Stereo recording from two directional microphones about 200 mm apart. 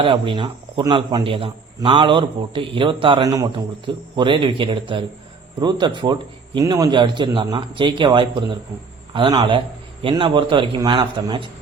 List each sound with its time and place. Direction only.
0.0 s a man's voice: 25° right (ahead or behind)